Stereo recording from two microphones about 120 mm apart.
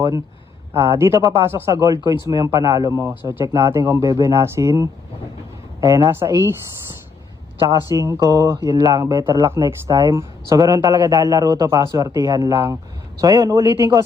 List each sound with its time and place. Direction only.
0.8 s speech: 20° right (ahead or behind)
7.7 s speech: 25° right (ahead or behind)